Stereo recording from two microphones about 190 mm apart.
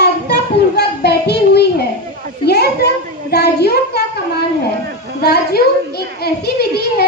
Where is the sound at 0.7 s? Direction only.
60° left (ahead or behind).